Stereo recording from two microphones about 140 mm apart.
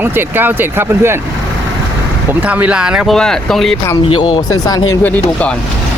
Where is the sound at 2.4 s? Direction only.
10° right (ahead or behind).